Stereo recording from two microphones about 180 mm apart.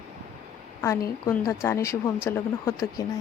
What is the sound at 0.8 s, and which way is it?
A woman's voice, 15° left (ahead or behind).